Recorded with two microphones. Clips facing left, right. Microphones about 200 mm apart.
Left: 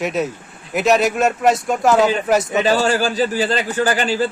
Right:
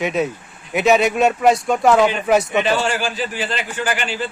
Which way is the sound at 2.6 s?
40° left (ahead or behind).